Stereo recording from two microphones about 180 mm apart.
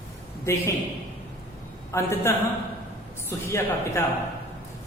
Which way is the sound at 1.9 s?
15° left (ahead or behind).